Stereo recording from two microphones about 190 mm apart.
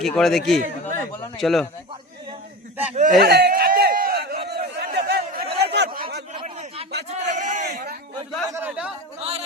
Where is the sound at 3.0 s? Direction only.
50° right (ahead or behind).